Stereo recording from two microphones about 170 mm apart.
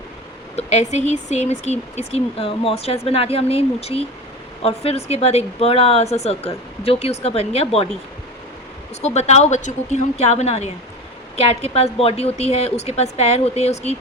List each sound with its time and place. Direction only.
0.5 s speech: 40° left (ahead or behind)
9.0 s speech: 40° left (ahead or behind)